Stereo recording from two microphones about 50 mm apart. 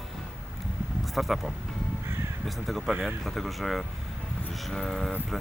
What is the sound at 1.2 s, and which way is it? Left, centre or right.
Speech, centre.